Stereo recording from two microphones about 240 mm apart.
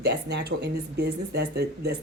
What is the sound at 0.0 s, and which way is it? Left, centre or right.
Speech, right.